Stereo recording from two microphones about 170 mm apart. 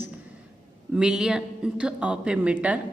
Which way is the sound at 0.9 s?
5° right (ahead or behind).